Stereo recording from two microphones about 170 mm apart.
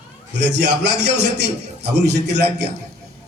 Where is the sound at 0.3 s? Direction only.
90° right.